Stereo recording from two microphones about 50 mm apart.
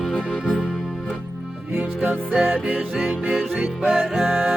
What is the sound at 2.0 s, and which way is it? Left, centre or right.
Music, right.